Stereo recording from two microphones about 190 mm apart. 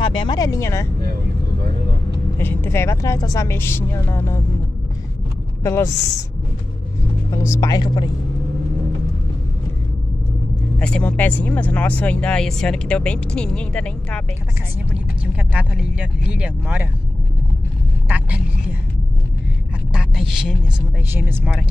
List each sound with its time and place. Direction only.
0.0 s a sound: 25° left (ahead or behind)
2.3 s a woman's voice: 10° left (ahead or behind)
5.6 s speech: 15° left (ahead or behind)
7.3 s speech: 15° left (ahead or behind)
10.8 s speech: 5° left (ahead or behind)
15.5 s speech: 5° right (ahead or behind)
18.0 s vehicle: 10° right (ahead or behind)
19.9 s a sound: 5° right (ahead or behind)
21.1 s speech: 10° right (ahead or behind)